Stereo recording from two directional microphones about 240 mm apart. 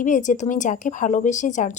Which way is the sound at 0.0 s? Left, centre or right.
Left.